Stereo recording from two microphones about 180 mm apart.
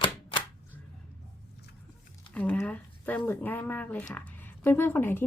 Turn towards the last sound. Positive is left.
turn(degrees=10)  # may be behind; listen again after turning